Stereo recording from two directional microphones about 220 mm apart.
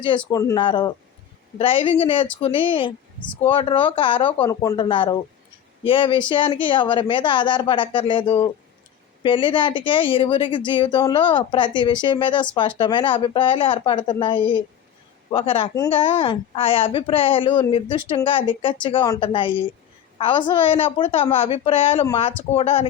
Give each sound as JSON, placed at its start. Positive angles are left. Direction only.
{"t": 0.3, "sound": "speech", "side_deg": 15}